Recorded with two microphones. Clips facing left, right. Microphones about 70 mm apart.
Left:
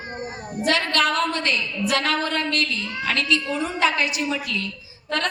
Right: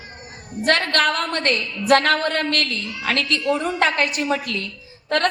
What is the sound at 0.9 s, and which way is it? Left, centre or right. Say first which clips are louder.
A woman's voice: right 1 dB; right.